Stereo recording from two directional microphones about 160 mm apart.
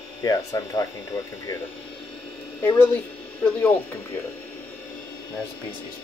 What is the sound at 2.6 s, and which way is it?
Speech, 15° left (ahead or behind).